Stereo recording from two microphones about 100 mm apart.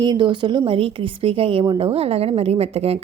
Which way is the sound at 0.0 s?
50° right (ahead or behind).